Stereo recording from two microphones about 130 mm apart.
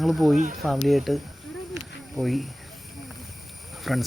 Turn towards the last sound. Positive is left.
turn(degrees=0)  # may be behind; listen again after turning